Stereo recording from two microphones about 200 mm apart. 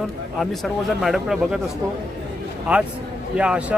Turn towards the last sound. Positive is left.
turn(degrees=-5)  # may be behind; listen again after turning